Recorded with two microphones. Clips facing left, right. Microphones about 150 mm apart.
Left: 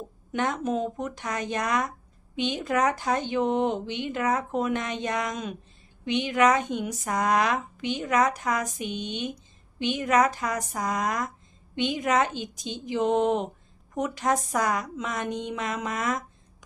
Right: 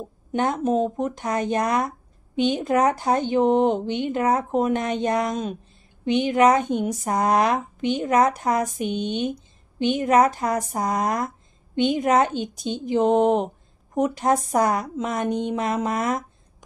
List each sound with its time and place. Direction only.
0.3 s a woman's voice: 35° right (ahead or behind)
4.2 s a woman's voice: 35° right (ahead or behind)
6.5 s a woman's voice: 45° right (ahead or behind)
8.3 s a woman's voice: 45° right (ahead or behind)
11.7 s a woman's voice: 45° right (ahead or behind)
15.1 s a woman's voice: 45° right (ahead or behind)
15.5 s a woman's voice: 35° right (ahead or behind)